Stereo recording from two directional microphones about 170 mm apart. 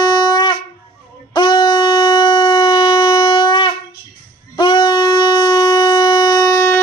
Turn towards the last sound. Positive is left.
turn(degrees=20)  # may be behind; listen again after turning